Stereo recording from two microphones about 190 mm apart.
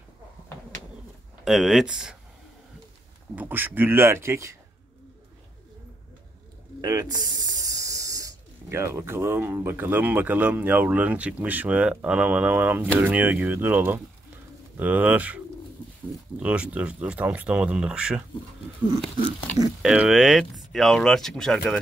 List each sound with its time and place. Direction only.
1.4 s speech: centre (ahead or behind)
3.3 s speech: 10° right (ahead or behind)
6.8 s speech: 20° right (ahead or behind); by 21.7 s centre (ahead or behind)